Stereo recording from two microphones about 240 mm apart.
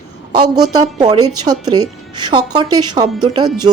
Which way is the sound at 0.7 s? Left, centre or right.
Centre.